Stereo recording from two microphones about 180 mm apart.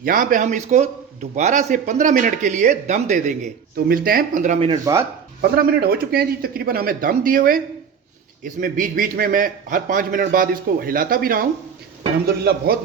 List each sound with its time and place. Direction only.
0.0 s a man's voice: 50° right (ahead or behind)
4.9 s speech: 20° right (ahead or behind)
5.4 s a man's voice: 60° right (ahead or behind)